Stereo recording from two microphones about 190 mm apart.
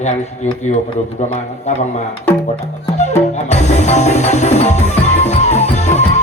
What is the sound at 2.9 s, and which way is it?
Music, 35° left (ahead or behind).